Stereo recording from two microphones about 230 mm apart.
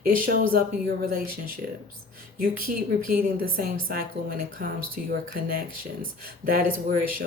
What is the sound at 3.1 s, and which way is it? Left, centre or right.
Speech, right.